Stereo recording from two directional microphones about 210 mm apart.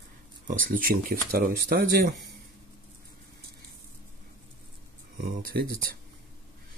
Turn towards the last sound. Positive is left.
turn(degrees=-45)  # may be behind; listen again after turning